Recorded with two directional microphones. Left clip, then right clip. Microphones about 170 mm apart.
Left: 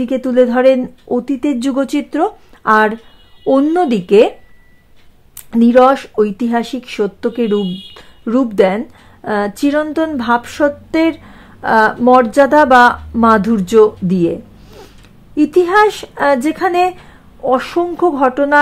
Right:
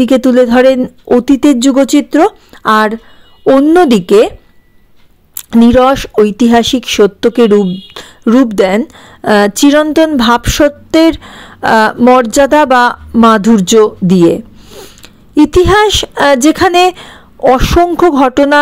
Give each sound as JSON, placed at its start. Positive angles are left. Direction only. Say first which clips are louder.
{"t": 0.0, "sound": "speech", "louder": "right 5 dB", "side_deg": -35}
{"t": 5.5, "sound": "speech", "louder": "right 2 dB", "side_deg": -35}